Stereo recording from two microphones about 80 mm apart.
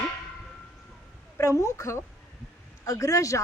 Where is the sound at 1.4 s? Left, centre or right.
Left.